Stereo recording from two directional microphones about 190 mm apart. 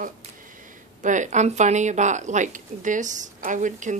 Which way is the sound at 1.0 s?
40° right (ahead or behind).